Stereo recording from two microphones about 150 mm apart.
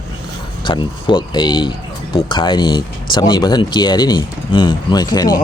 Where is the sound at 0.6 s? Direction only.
30° left (ahead or behind).